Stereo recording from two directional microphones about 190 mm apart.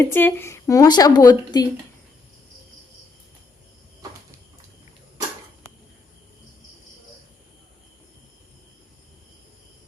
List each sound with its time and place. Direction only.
0.0 s speech: 10° left (ahead or behind)